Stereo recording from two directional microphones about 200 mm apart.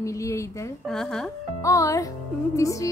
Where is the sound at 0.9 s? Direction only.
Centre (ahead or behind).